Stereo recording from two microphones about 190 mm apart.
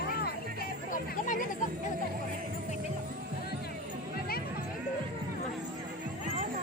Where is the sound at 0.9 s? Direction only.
45° left (ahead or behind).